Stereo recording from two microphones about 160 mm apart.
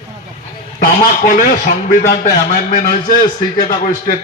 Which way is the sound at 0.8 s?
60° left (ahead or behind).